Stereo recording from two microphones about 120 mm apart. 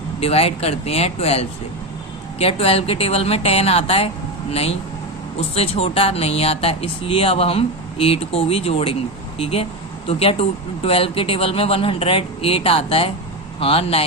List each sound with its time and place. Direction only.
0.2 s a woman's voice: 55° left (ahead or behind)